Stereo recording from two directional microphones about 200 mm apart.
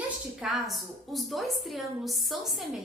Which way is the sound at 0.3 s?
Centre (ahead or behind).